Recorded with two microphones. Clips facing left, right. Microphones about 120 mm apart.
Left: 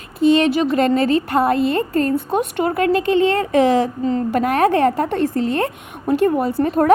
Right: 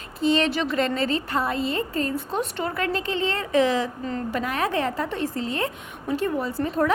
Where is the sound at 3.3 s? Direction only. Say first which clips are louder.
Left 6 dB; 55° left (ahead or behind).